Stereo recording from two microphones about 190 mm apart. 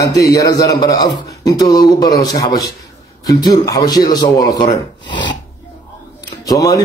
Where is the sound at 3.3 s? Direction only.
20° left (ahead or behind).